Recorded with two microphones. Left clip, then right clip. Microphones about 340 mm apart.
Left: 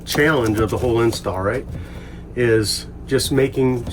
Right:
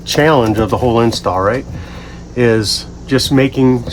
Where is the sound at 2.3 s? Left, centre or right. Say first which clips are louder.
Right 5 dB; right.